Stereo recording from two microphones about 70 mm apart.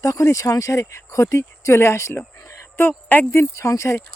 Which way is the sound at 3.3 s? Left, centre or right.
Left.